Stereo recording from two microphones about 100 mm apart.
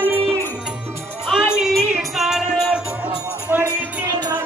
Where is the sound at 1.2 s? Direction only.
5° right (ahead or behind).